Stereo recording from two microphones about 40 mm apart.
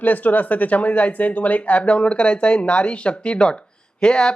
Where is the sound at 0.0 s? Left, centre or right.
Left.